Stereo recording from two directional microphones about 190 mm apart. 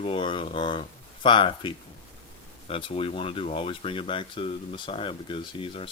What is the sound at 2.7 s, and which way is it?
Speech, 30° left (ahead or behind).